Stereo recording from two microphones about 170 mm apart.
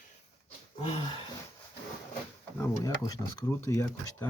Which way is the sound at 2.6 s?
15° left (ahead or behind).